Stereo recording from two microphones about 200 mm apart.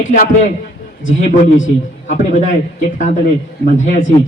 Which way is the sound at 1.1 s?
40° left (ahead or behind).